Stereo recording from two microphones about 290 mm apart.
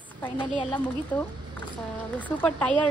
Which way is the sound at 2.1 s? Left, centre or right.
Centre.